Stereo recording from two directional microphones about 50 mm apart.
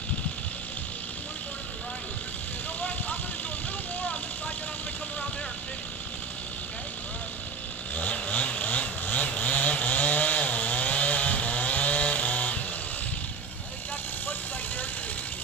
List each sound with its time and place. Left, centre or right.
7.9 s chainsaw: left